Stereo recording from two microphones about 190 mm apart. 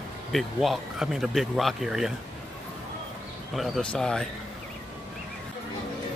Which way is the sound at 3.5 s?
Centre (ahead or behind).